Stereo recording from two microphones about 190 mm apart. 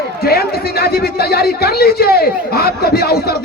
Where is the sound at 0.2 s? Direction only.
55° left (ahead or behind).